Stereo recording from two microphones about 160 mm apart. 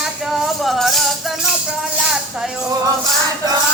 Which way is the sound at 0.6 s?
Centre (ahead or behind).